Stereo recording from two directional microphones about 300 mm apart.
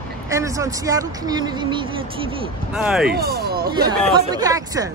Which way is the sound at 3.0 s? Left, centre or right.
Right.